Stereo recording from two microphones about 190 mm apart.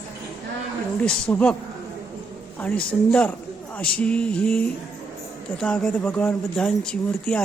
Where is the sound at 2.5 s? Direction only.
5° left (ahead or behind).